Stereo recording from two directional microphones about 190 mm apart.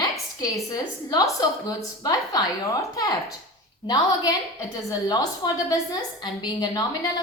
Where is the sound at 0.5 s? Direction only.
15° left (ahead or behind).